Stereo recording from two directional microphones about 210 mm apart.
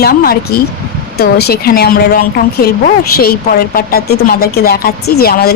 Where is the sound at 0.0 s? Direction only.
45° left (ahead or behind).